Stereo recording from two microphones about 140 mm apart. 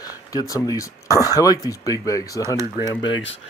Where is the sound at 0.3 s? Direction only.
25° left (ahead or behind).